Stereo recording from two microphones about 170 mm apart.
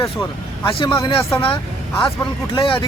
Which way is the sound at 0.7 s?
30° left (ahead or behind).